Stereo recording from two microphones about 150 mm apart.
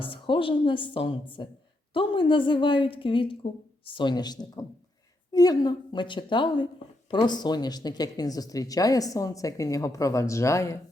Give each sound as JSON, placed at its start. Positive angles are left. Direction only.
{"t": 0.0, "sound": "a woman's voice", "side_deg": 35}